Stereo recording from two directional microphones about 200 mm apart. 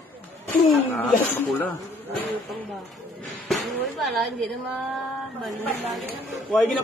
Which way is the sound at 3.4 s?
Centre (ahead or behind).